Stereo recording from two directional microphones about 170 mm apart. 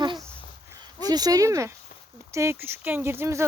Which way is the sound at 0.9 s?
20° right (ahead or behind).